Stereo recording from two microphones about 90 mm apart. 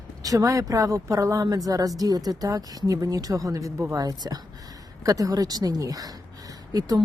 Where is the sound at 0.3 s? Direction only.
40° right (ahead or behind).